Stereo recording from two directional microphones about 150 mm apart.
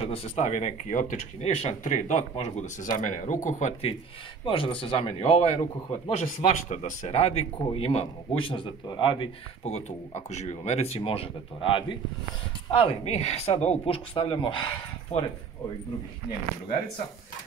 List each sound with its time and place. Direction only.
0.0 s speech: 40° left (ahead or behind)
4.5 s a man's voice: 35° left (ahead or behind)
6.4 s a man's voice: 55° left (ahead or behind); by 9.3 s 30° left (ahead or behind)
9.7 s a man's voice: 50° left (ahead or behind)
15.1 s speech: 45° left (ahead or behind)